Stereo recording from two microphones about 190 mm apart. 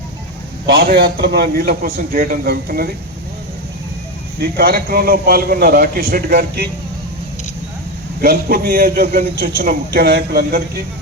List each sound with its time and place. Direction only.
0.7 s a man's voice: 55° right (ahead or behind)
4.4 s a man's voice: 55° right (ahead or behind)
8.2 s a man's voice: 50° right (ahead or behind)